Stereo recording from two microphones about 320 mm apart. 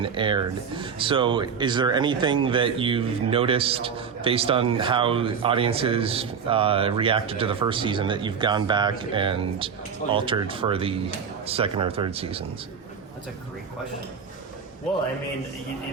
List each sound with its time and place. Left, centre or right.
0.0 s speech: centre